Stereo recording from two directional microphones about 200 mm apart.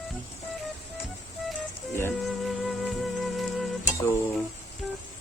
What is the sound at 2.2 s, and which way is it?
Music, centre (ahead or behind).